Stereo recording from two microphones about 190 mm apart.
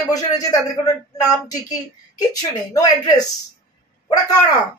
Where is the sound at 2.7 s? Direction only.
20° left (ahead or behind).